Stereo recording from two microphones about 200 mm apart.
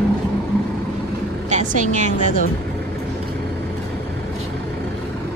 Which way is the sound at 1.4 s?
35° right (ahead or behind).